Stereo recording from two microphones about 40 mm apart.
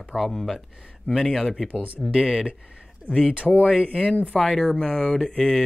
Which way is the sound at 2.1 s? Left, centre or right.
Centre.